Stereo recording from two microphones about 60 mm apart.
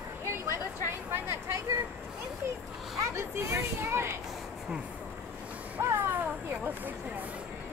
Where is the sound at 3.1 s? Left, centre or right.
Right.